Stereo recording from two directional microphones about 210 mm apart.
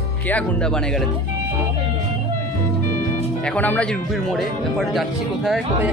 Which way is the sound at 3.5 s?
10° left (ahead or behind).